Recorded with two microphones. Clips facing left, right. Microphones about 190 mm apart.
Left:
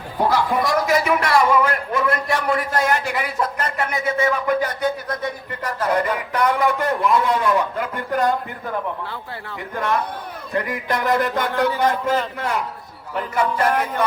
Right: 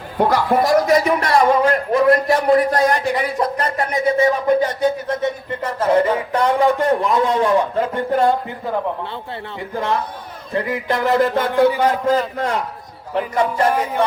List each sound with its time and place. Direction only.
0.2 s speech: 60° right (ahead or behind)
0.5 s a man's voice: 40° right (ahead or behind); by 8.8 s 20° right (ahead or behind)
9.7 s music: 20° right (ahead or behind)
11.5 s a man's voice: 15° right (ahead or behind)
12.4 s music: 30° right (ahead or behind)
13.1 s a man's voice: 30° right (ahead or behind)
13.7 s a man's voice: 10° right (ahead or behind)